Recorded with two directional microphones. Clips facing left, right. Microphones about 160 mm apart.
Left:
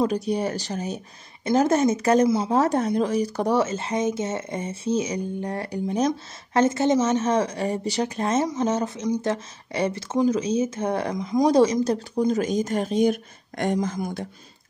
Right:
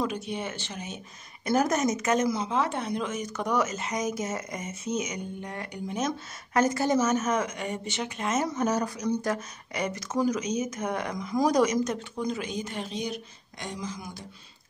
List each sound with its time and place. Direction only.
0.0 s speech: 35° left (ahead or behind)
2.5 s speech: 40° left (ahead or behind)